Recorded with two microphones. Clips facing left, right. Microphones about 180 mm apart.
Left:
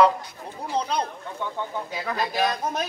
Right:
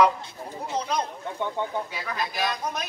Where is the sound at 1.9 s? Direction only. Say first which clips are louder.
Left 4 dB; 40° left (ahead or behind).